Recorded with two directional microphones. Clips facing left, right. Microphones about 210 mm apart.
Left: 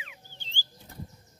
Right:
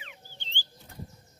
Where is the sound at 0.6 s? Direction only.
45° left (ahead or behind).